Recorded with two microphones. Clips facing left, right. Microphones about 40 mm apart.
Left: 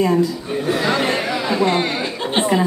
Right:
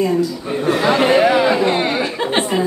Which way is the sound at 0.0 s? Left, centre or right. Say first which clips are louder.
Even; centre.